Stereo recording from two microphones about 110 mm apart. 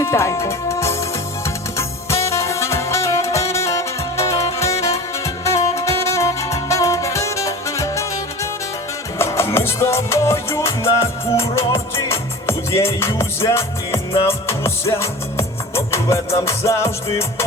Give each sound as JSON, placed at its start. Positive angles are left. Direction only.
{"t": 0.0, "sound": "music", "side_deg": 25}
{"t": 2.0, "sound": "saxophone", "side_deg": 25}
{"t": 9.1, "sound": "music", "side_deg": 25}